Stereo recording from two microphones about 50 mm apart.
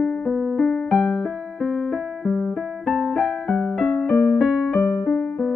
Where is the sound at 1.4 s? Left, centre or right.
Centre.